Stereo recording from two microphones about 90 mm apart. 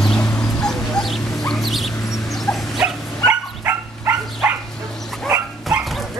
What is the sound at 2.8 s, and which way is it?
Dog, 15° right (ahead or behind).